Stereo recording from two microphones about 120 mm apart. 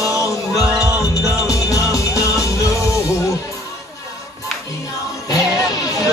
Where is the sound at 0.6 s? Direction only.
10° right (ahead or behind).